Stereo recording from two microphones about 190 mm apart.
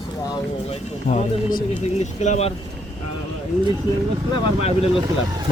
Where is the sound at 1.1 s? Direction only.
40° left (ahead or behind).